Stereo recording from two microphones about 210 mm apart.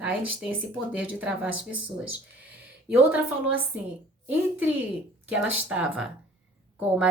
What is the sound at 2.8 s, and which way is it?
Speech, 5° right (ahead or behind).